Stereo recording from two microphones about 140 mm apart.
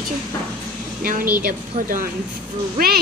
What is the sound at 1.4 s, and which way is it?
A woman's voice, 85° right.